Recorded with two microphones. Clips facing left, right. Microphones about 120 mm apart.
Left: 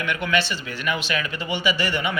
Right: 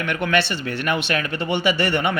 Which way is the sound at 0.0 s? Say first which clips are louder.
Right 3 dB; 50° right (ahead or behind).